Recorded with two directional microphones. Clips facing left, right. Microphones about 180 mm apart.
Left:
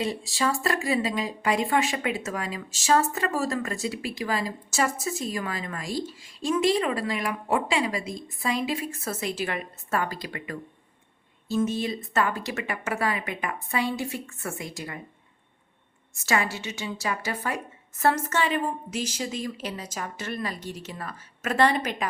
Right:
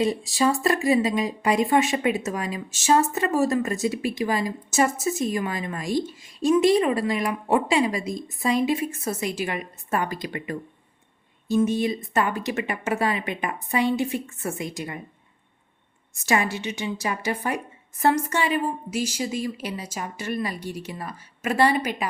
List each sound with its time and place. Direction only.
0.0 s speech: 20° right (ahead or behind)
16.2 s a woman's voice: 20° right (ahead or behind)